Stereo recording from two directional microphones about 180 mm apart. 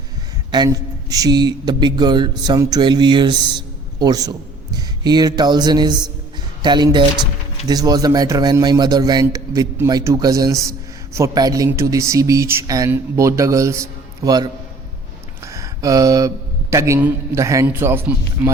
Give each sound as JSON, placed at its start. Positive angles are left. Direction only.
{"t": 0.5, "sound": "a man's voice", "side_deg": -20}